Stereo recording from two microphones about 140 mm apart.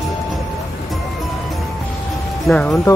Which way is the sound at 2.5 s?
Centre (ahead or behind).